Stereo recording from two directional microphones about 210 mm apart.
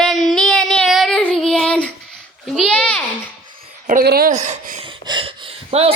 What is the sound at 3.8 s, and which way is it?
Speech, 45° right (ahead or behind).